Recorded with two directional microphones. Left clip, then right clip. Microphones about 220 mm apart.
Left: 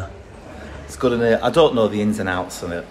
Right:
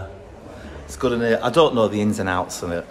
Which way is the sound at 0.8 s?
5° right (ahead or behind).